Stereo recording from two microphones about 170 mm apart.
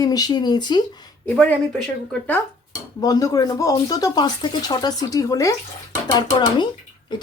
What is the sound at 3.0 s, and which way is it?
Speech, 20° left (ahead or behind).